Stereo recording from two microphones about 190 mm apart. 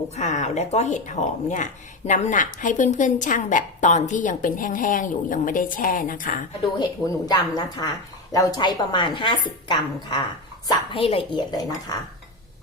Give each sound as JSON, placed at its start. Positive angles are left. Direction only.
{"t": 0.2, "sound": "speech", "side_deg": 40}
{"t": 6.7, "sound": "speech", "side_deg": 20}